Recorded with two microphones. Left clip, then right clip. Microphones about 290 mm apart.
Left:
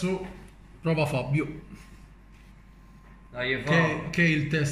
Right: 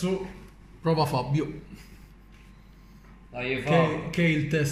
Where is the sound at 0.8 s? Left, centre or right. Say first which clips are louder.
Right 2 dB; centre.